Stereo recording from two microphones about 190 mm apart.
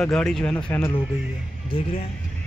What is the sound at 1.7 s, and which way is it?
Speech, 30° left (ahead or behind).